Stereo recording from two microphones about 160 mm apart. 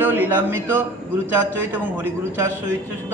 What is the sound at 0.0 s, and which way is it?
Speech, 10° right (ahead or behind).